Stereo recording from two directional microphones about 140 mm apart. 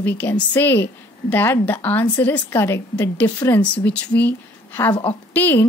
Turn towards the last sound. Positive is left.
turn(degrees=15)  # may be behind; listen again after turning